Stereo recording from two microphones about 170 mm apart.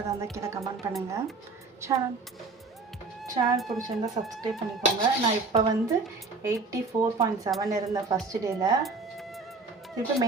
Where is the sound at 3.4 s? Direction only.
35° right (ahead or behind).